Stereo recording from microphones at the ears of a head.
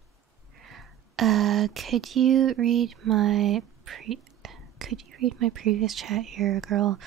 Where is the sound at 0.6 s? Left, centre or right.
Right.